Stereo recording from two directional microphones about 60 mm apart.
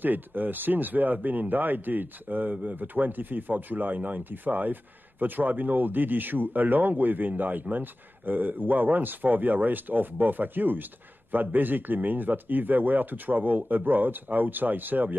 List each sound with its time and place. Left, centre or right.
0.0 s a man's voice: right